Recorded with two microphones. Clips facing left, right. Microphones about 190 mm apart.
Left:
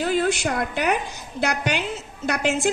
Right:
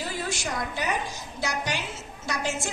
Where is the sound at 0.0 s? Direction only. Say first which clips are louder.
Left 10 dB; 60° left (ahead or behind).